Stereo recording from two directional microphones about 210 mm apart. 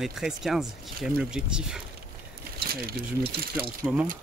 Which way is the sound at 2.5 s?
45° right (ahead or behind).